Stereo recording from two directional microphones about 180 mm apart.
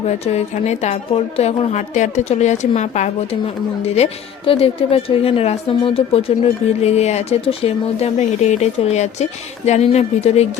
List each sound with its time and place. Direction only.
0.3 s a woman's voice: 35° left (ahead or behind)